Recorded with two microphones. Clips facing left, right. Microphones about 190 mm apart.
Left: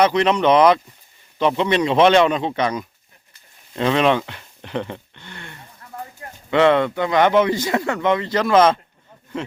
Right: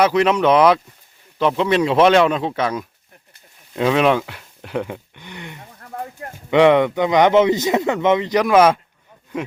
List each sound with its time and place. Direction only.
0.0 s speech: 5° right (ahead or behind)
5.8 s a sound: 55° right (ahead or behind)
6.5 s speech: 15° right (ahead or behind)